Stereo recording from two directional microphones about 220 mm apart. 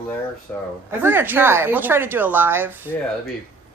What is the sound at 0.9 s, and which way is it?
Speech, 10° right (ahead or behind).